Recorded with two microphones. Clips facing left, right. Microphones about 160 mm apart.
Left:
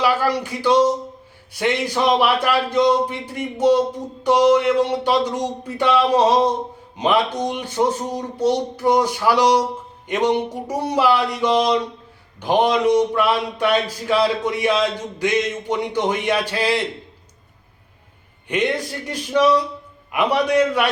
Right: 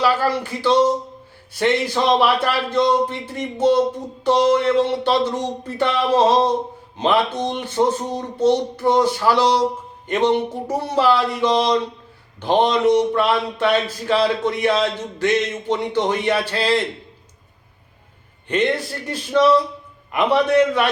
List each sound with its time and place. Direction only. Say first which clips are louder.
0.0 s speech: even; 15° left (ahead or behind)
18.4 s speech: right 1 dB; 10° left (ahead or behind)